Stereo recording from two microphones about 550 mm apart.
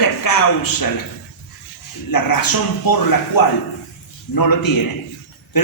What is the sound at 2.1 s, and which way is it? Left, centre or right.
A woman's voice, left.